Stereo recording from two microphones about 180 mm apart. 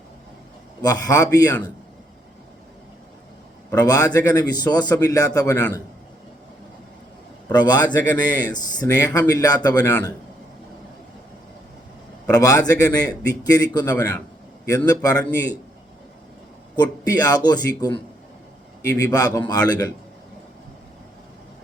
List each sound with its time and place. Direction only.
0.8 s a man's voice: 20° left (ahead or behind)
3.7 s a man's voice: 20° left (ahead or behind)
7.5 s a man's voice: 20° left (ahead or behind)
12.2 s a man's voice: 20° left (ahead or behind)
16.8 s a man's voice: 20° left (ahead or behind)